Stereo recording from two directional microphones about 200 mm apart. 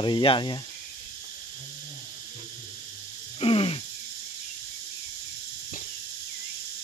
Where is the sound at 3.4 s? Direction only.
30° left (ahead or behind).